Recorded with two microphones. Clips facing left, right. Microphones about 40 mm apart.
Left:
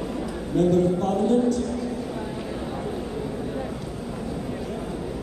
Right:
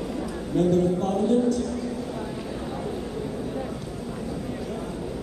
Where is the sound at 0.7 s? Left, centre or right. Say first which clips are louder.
Left 1 dB; centre.